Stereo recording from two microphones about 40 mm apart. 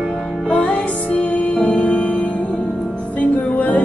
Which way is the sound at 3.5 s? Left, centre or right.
Left.